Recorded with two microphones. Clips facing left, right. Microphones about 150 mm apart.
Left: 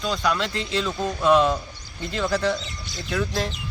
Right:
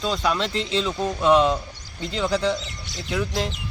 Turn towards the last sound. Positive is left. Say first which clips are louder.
# even
turn(degrees=-15)  # may be behind; listen again after turning